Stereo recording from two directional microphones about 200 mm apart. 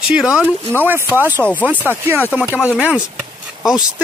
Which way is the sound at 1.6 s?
10° right (ahead or behind).